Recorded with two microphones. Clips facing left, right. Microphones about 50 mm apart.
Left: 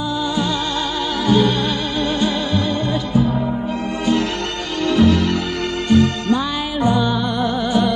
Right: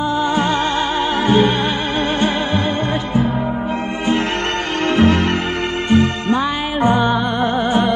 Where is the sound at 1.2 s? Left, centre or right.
Right.